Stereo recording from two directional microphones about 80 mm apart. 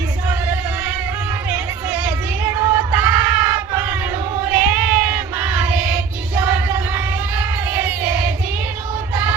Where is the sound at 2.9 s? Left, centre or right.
Right.